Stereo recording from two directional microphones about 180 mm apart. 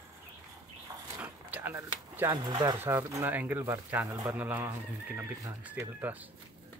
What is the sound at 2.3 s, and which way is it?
Speech, 25° right (ahead or behind).